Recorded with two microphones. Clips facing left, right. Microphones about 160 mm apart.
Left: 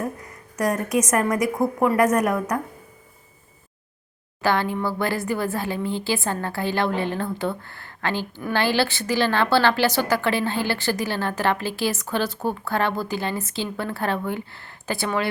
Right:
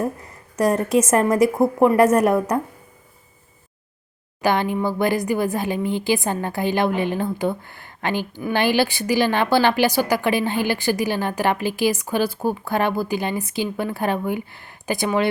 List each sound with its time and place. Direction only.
0.5 s a woman's voice: 30° right (ahead or behind)
4.4 s a woman's voice: 15° right (ahead or behind)